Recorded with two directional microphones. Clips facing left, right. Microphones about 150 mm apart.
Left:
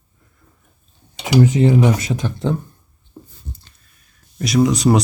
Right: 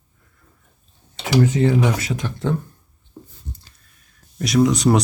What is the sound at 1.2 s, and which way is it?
Speech, 15° left (ahead or behind).